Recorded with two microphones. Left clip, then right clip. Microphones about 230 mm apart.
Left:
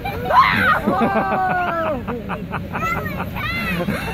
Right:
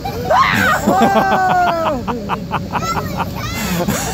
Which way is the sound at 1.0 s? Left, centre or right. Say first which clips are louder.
Right 6 dB; centre.